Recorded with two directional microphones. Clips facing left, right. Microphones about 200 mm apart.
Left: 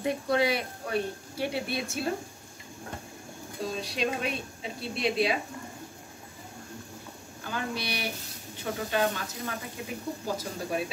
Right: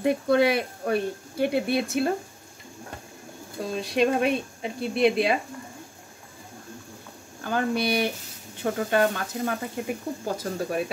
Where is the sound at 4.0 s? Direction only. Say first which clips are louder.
Right 10 dB; 55° right (ahead or behind).